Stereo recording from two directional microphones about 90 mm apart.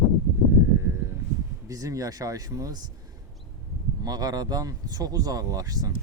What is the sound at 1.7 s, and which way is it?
Speech, 40° right (ahead or behind).